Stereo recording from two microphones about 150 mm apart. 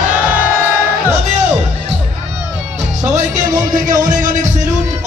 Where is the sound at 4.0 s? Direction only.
60° right (ahead or behind).